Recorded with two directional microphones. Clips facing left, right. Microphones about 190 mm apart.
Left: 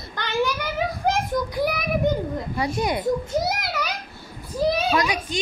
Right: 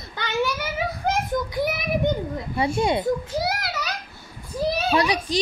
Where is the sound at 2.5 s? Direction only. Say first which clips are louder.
Right 4 dB; 25° right (ahead or behind).